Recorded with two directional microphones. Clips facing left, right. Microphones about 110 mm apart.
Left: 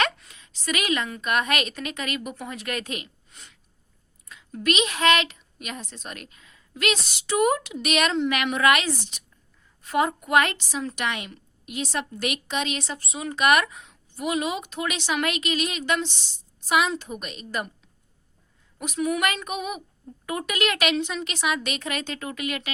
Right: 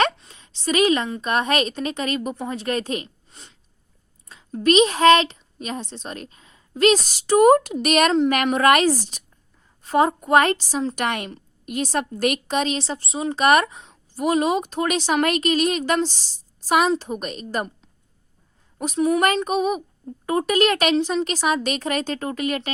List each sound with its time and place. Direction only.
0.0 s a woman's voice: 30° right (ahead or behind)
18.8 s a woman's voice: 30° right (ahead or behind)